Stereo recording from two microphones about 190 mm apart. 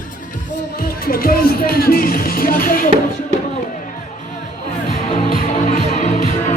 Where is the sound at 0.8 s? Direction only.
50° left (ahead or behind).